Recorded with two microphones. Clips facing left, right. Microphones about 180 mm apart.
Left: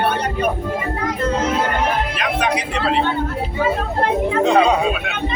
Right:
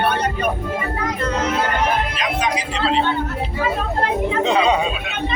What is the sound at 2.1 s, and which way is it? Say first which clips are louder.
Speech: left 2 dB; 60° left (ahead or behind).